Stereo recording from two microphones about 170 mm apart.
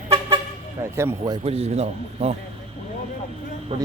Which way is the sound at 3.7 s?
35° right (ahead or behind).